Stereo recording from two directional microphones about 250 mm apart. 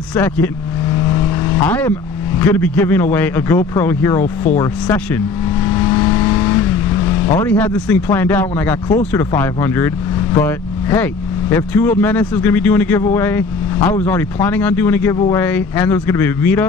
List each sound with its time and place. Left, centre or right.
0.1 s speech: centre
1.7 s speech: centre